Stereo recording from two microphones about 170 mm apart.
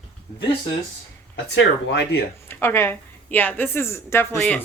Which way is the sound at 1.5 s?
85° left.